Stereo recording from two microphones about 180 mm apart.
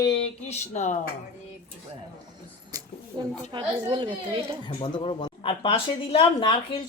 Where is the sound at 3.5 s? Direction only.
25° right (ahead or behind).